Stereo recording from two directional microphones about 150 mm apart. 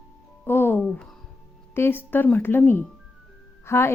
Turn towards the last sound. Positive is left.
turn(degrees=20)  # may be behind; listen again after turning